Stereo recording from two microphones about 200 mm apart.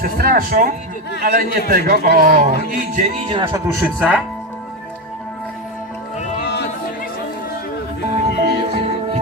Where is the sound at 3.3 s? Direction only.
25° right (ahead or behind).